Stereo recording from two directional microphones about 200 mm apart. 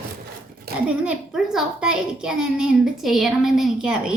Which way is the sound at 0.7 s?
50° right (ahead or behind).